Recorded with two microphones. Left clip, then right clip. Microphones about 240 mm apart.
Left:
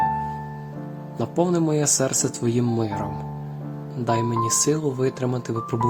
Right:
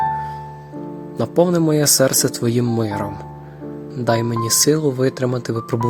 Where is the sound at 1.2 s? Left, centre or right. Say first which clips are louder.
Right 6 dB; centre.